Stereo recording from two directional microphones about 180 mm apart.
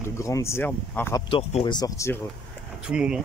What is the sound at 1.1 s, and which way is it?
Speech, 30° left (ahead or behind).